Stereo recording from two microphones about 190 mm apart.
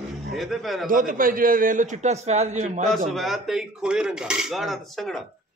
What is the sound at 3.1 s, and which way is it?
Speech, centre (ahead or behind).